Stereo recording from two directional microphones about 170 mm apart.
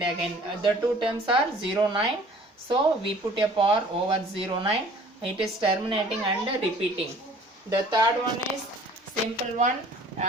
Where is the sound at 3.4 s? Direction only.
30° right (ahead or behind).